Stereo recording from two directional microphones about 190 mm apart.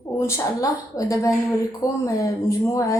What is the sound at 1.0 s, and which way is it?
Speech, 15° left (ahead or behind).